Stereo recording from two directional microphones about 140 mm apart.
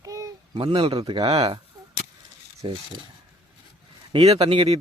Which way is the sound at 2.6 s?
40° right (ahead or behind).